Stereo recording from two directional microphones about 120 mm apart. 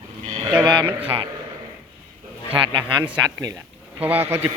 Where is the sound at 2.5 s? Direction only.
45° right (ahead or behind).